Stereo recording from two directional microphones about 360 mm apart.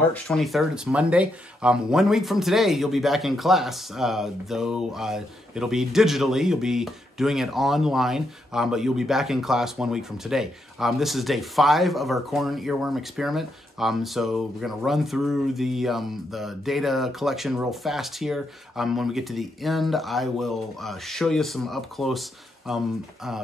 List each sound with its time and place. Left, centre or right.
0.1 s speech: centre